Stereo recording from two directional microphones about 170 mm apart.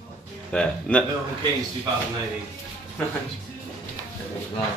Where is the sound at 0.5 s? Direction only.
5° left (ahead or behind).